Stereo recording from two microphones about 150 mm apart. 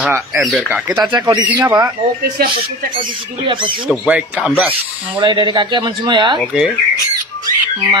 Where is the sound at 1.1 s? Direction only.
25° right (ahead or behind).